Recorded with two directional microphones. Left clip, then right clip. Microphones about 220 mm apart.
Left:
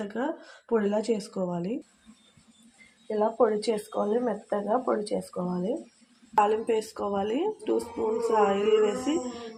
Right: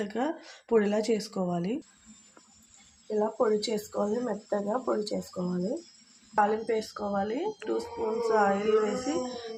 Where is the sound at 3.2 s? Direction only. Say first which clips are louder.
Left 3 dB; 10° left (ahead or behind).